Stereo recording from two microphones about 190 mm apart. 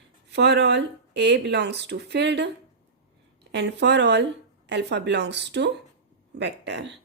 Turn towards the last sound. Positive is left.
turn(degrees=-65)  # may be behind; listen again after turning